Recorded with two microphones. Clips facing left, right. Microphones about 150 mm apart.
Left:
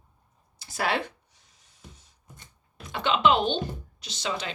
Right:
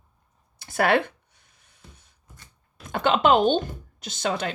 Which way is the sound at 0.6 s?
60° right (ahead or behind).